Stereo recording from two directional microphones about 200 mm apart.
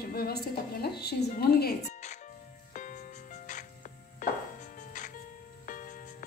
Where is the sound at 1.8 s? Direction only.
35° left (ahead or behind).